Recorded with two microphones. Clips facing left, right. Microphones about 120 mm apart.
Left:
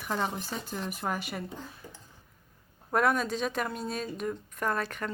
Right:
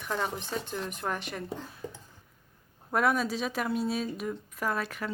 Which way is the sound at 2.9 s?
Centre (ahead or behind).